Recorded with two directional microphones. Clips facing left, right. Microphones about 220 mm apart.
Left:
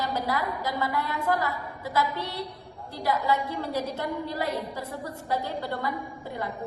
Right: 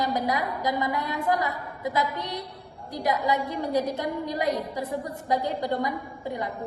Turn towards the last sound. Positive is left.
turn(degrees=-15)  # may be behind; listen again after turning